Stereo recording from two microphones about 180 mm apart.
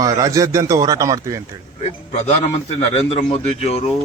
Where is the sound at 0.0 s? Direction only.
20° right (ahead or behind).